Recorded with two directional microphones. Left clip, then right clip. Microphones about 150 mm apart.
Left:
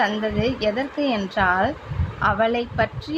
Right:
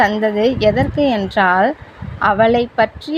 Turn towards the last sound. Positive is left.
turn(degrees=-45)  # may be behind; listen again after turning